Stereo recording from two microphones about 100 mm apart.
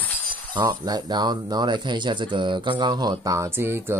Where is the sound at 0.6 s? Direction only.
40° right (ahead or behind).